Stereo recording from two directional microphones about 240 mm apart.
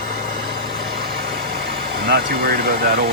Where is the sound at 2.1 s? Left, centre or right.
Right.